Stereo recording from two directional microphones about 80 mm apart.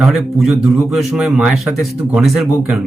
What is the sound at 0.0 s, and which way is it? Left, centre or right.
Speech, centre.